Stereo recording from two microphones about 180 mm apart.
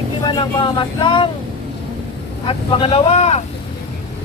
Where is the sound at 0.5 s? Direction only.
25° left (ahead or behind).